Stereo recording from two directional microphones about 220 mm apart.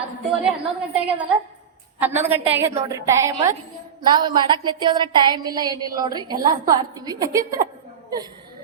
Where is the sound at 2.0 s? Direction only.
10° right (ahead or behind).